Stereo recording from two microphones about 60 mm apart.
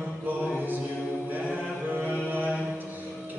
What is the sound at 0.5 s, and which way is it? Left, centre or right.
A capella, right.